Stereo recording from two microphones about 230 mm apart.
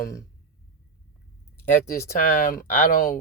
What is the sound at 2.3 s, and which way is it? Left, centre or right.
Speech, left.